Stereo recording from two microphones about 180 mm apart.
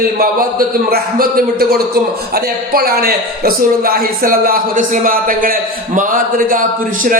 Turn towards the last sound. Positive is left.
turn(degrees=-50)  # may be behind; listen again after turning